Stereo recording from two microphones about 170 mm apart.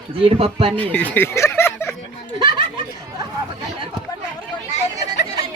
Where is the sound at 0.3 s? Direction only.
35° right (ahead or behind).